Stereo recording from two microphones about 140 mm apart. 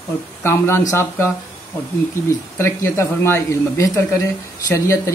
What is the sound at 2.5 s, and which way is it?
Speech, 15° left (ahead or behind).